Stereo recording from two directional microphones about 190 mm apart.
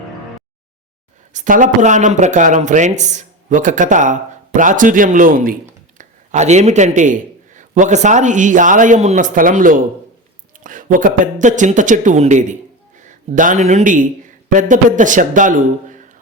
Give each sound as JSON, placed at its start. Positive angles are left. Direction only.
{"t": 1.3, "sound": "a man's voice", "side_deg": -40}